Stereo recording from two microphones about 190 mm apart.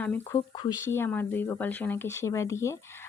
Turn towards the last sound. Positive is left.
turn(degrees=15)  # may be behind; listen again after turning